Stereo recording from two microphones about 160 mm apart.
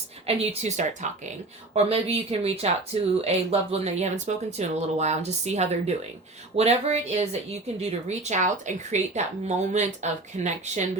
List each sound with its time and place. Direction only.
0.3 s speech: 45° right (ahead or behind)